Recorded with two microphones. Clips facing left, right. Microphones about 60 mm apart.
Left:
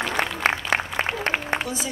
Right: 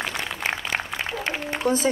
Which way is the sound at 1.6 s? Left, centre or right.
Right.